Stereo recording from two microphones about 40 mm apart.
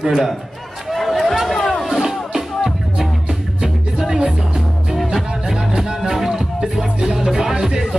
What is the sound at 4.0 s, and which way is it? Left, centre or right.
Music, centre.